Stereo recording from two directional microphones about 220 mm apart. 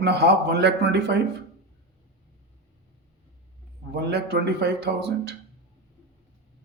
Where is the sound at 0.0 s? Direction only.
50° right (ahead or behind).